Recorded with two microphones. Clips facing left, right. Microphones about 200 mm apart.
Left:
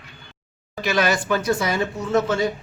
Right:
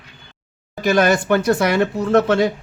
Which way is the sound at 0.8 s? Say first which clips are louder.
Right 6 dB; 50° right (ahead or behind).